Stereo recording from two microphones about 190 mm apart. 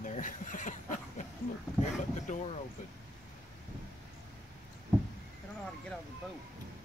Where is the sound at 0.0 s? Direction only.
40° left (ahead or behind).